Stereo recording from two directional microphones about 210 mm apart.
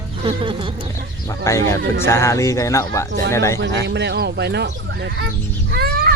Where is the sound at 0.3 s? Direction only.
25° right (ahead or behind).